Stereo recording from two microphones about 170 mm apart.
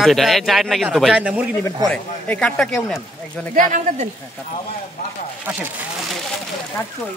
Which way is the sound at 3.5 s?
50° right (ahead or behind).